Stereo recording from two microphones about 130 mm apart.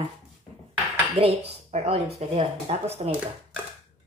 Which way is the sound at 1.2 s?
50° right (ahead or behind).